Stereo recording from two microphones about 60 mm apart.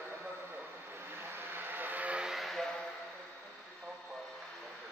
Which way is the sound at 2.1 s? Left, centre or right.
Centre.